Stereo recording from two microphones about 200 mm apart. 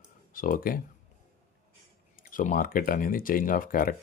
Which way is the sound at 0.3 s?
45° left (ahead or behind).